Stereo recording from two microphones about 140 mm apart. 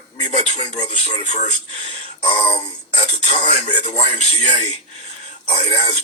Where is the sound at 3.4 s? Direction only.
60° left (ahead or behind).